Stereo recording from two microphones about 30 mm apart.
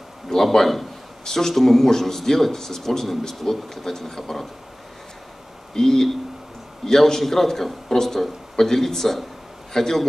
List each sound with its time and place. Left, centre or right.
0.3 s speech: centre
5.8 s a man's voice: centre